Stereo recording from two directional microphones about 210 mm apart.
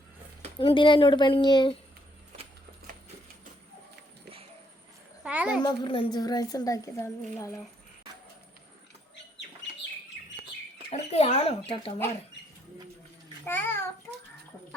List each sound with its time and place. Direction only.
0.6 s speech: 25° left (ahead or behind)
5.2 s a sound: 5° right (ahead or behind)
5.6 s a woman's voice: 25° left (ahead or behind)
10.9 s speech: 30° left (ahead or behind)
13.4 s child singing: 10° left (ahead or behind)